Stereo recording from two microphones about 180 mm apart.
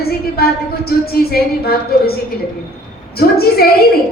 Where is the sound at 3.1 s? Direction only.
60° left (ahead or behind).